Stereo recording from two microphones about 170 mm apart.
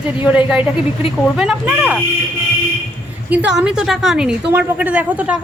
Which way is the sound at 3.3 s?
5° right (ahead or behind).